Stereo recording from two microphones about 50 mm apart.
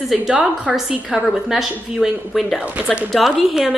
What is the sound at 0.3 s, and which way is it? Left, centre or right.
Speech, centre.